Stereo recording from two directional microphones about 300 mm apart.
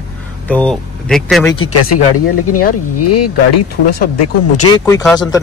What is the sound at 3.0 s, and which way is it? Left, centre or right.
Speech, left.